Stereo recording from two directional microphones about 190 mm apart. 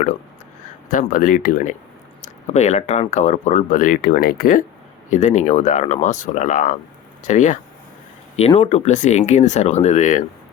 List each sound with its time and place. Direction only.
0.9 s speech: 45° left (ahead or behind)